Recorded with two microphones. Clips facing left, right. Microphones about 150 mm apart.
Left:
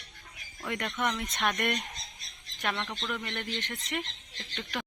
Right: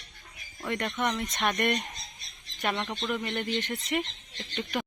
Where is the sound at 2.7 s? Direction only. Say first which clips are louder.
Right 4 dB; 20° right (ahead or behind).